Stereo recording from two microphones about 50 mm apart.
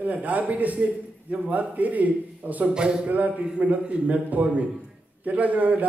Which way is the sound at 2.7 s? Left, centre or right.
Centre.